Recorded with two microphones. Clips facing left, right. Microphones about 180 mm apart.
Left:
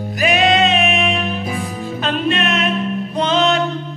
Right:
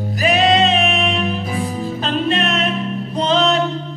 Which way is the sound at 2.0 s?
35° right (ahead or behind).